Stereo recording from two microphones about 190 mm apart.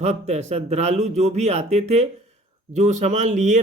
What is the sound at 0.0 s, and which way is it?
Speech, 35° right (ahead or behind).